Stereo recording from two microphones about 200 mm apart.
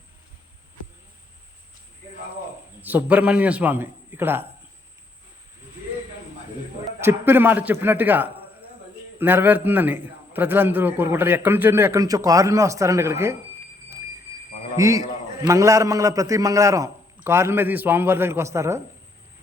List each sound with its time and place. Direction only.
2.8 s a man's voice: 10° right (ahead or behind)
7.0 s a man's voice: 10° right (ahead or behind)
14.8 s a man's voice: 15° right (ahead or behind)